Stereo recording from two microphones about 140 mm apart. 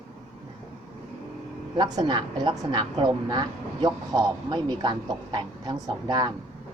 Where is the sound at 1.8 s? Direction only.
30° right (ahead or behind).